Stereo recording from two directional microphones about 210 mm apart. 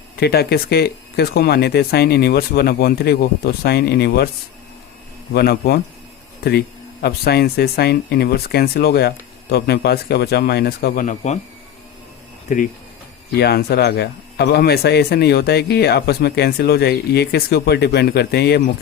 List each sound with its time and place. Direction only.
0.2 s speech: 50° left (ahead or behind)
5.3 s speech: 50° left (ahead or behind)
13.3 s speech: 50° left (ahead or behind)